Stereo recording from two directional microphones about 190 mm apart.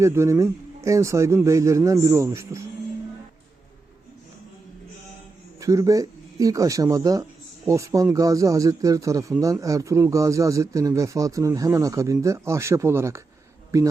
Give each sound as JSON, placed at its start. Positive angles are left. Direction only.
{"t": 0.0, "sound": "speech", "side_deg": -15}
{"t": 5.5, "sound": "speech", "side_deg": -15}